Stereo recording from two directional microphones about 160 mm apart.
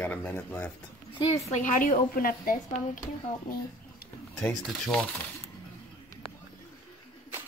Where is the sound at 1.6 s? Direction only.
60° left (ahead or behind).